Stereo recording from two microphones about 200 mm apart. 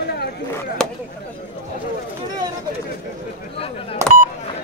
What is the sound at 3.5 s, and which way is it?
Speech, 30° left (ahead or behind).